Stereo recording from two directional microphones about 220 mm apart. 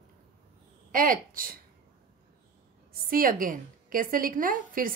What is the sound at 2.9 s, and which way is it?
A woman's voice, 40° right (ahead or behind).